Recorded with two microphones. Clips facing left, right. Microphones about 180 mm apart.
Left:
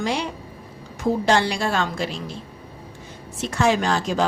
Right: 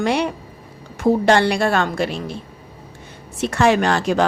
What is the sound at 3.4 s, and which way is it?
Speech, 65° right (ahead or behind).